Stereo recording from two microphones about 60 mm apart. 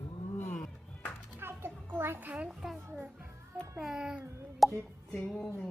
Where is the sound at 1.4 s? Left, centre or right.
Right.